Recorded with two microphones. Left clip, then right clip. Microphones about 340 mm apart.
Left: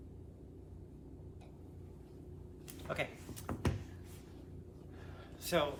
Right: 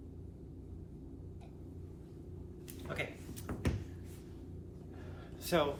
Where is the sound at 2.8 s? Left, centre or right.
Centre.